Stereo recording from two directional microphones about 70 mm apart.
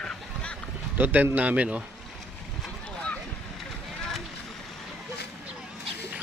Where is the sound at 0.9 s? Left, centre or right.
Right.